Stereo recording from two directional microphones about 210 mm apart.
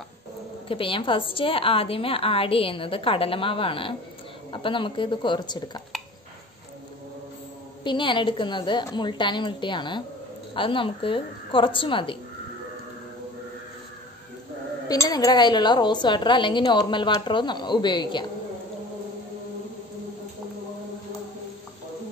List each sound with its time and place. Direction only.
0.7 s a woman's voice: 25° left (ahead or behind)
7.8 s a woman's voice: 20° left (ahead or behind)
14.9 s a woman's voice: 15° left (ahead or behind)